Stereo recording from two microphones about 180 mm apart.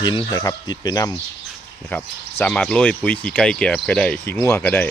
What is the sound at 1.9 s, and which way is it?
Speech, 10° left (ahead or behind).